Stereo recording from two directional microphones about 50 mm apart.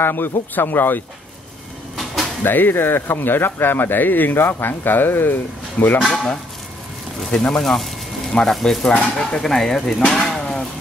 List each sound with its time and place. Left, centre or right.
0.0 s speech: left
2.4 s speech: left
7.2 s speech: centre
8.8 s speech: centre